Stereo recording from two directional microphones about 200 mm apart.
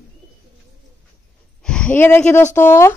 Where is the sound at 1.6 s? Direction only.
5° left (ahead or behind).